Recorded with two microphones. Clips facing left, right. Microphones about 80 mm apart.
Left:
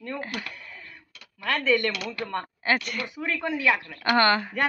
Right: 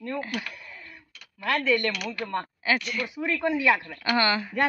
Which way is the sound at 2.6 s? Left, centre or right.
Left.